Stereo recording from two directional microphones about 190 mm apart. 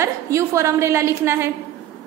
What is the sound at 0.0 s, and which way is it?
A woman's voice, 15° right (ahead or behind).